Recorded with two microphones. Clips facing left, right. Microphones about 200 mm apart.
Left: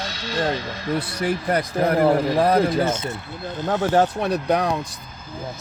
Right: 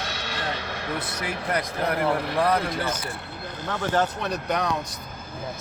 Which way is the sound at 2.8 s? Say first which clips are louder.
Left 7 dB; 25° left (ahead or behind).